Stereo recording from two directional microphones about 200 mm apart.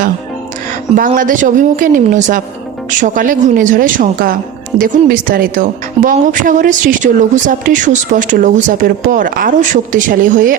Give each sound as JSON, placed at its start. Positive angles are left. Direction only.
{"t": 0.9, "sound": "a woman's voice", "side_deg": -45}